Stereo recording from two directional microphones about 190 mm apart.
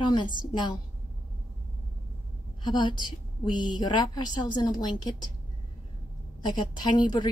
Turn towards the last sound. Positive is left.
turn(degrees=25)  # may be behind; listen again after turning